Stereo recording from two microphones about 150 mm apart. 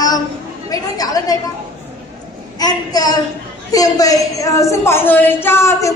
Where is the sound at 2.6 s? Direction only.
25° left (ahead or behind).